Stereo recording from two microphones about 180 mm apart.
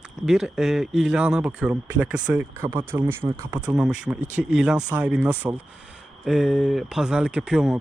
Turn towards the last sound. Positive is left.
turn(degrees=-5)  # may be behind; listen again after turning